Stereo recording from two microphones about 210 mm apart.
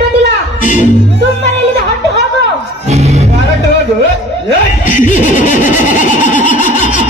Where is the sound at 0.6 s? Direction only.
35° left (ahead or behind).